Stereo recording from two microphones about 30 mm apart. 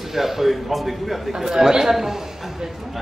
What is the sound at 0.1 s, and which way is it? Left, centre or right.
A man's voice, centre.